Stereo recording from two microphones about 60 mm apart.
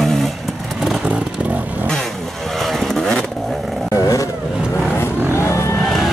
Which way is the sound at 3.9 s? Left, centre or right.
Left.